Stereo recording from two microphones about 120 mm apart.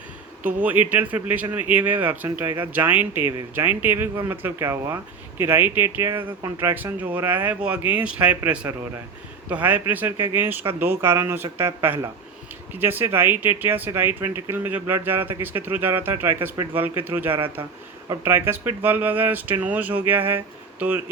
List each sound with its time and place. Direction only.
0.4 s speech: 15° right (ahead or behind)
9.5 s speech: 15° right (ahead or behind)
17.3 s speech: 45° right (ahead or behind)
18.2 s speech: 20° right (ahead or behind)